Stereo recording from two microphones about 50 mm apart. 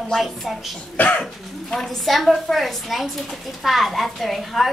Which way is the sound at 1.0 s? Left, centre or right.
Left.